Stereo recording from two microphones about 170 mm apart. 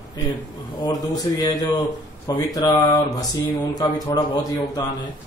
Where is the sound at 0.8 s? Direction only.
25° left (ahead or behind).